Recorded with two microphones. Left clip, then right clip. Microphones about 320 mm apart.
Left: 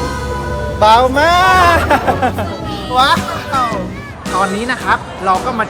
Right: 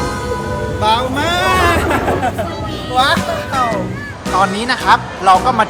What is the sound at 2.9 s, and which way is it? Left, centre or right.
Speech, centre.